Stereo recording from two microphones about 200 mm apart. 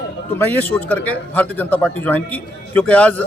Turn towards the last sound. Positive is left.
turn(degrees=5)  # may be behind; listen again after turning